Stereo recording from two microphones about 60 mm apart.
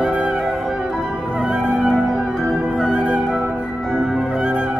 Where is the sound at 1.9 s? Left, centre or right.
Centre.